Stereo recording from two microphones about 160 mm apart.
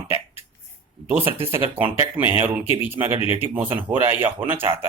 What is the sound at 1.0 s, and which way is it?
Speech, 10° right (ahead or behind).